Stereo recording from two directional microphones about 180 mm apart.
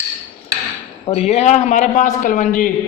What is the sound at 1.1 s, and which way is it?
A man's voice, 35° left (ahead or behind).